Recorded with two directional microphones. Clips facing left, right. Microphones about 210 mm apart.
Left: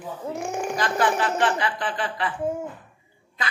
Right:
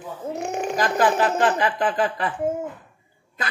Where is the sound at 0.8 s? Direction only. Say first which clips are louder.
Right 4 dB; 40° right (ahead or behind).